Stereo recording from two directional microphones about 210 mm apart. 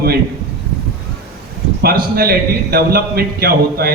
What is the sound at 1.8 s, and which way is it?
A man's voice, 45° right (ahead or behind).